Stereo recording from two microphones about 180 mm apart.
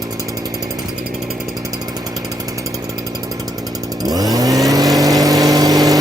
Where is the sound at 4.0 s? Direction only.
20° right (ahead or behind).